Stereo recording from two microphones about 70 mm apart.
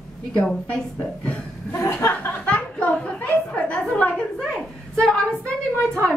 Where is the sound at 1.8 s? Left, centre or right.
Left.